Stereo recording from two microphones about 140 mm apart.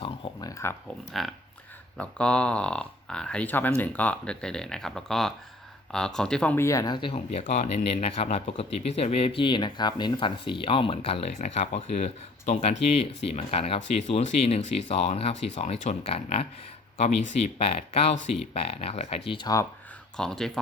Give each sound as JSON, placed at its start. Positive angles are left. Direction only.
{"t": 0.0, "sound": "speech", "side_deg": 25}
{"t": 1.2, "sound": "speech", "side_deg": 0}
{"t": 6.7, "sound": "speech", "side_deg": 25}
{"t": 7.4, "sound": "speech", "side_deg": 65}
{"t": 20.1, "sound": "speech", "side_deg": 5}